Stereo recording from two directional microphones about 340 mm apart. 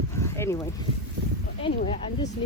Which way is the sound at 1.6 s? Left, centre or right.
Left.